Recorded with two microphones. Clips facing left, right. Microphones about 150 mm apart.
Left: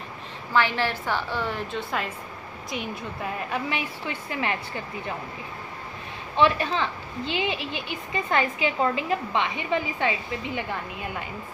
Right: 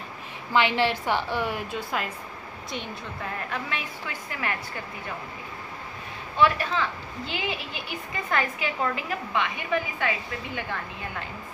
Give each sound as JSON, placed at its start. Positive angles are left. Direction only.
{"t": 0.5, "sound": "a woman's voice", "side_deg": -15}
{"t": 3.5, "sound": "a woman's voice", "side_deg": 20}
{"t": 6.3, "sound": "a woman's voice", "side_deg": 20}